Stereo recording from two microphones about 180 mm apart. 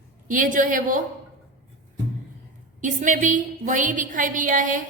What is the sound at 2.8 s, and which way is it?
A woman's voice, 45° right (ahead or behind).